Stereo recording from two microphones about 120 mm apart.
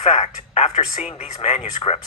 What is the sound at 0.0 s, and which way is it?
Speech, 65° left (ahead or behind).